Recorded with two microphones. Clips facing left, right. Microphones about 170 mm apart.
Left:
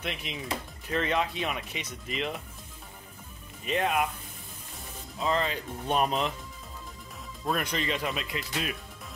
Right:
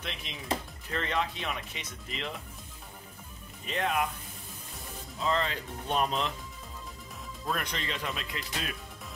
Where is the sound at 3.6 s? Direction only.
15° left (ahead or behind).